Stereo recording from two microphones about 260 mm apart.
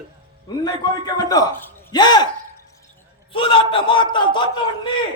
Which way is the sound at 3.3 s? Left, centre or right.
Centre.